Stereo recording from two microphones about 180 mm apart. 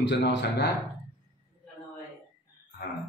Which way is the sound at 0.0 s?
90° left.